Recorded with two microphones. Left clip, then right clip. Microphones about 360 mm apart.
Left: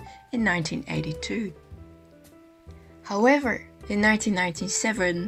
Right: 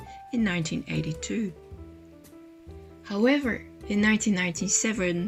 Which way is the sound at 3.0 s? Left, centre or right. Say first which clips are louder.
Left 4 dB; centre.